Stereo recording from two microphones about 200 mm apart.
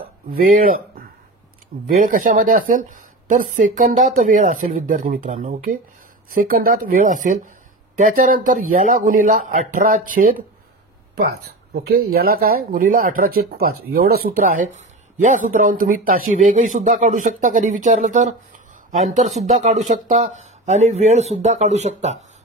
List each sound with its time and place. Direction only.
0.3 s speech: 45° right (ahead or behind)
11.7 s speech: 55° right (ahead or behind)
19.4 s speech: 35° right (ahead or behind)